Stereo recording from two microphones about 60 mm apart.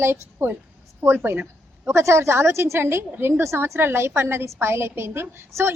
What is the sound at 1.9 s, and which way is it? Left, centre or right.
A woman's voice, right.